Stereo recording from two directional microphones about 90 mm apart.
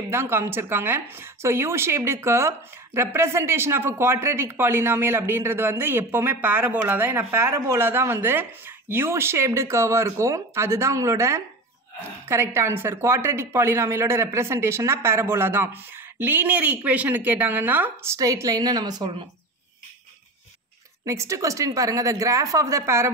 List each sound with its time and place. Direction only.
0.1 s speech: 25° right (ahead or behind)
18.1 s a woman's voice: 40° right (ahead or behind)
21.0 s speech: 35° right (ahead or behind)